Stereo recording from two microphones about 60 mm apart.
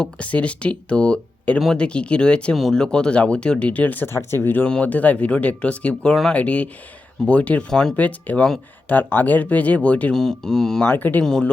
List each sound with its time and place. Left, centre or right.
0.2 s speech: left
2.6 s speech: centre
2.8 s speech: centre
4.0 s speech: left
4.6 s speech: left
7.7 s speech: centre
7.9 s speech: left
10.2 s speech: centre
10.9 s speech: left
11.2 s speech: centre